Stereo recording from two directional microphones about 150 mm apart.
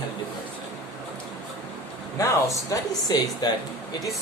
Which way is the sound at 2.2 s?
20° left (ahead or behind).